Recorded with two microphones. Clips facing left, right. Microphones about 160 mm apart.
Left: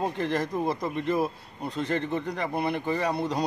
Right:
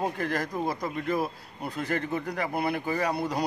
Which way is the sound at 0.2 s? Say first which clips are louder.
Left 2 dB; 25° left (ahead or behind).